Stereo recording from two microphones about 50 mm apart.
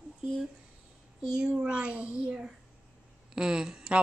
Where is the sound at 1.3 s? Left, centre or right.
Centre.